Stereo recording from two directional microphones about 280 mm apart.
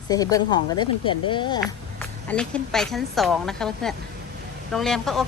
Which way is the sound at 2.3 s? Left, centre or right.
Centre.